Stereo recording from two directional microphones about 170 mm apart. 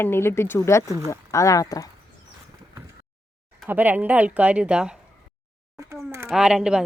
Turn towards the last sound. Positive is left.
turn(degrees=-5)  # may be behind; listen again after turning